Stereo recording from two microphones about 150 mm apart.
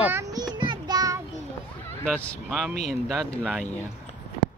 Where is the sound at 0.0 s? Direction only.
20° right (ahead or behind).